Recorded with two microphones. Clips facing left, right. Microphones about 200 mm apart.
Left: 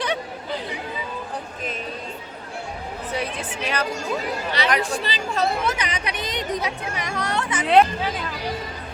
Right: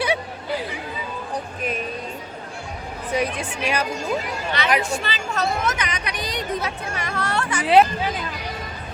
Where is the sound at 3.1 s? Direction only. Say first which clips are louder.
Right 5 dB; 10° right (ahead or behind).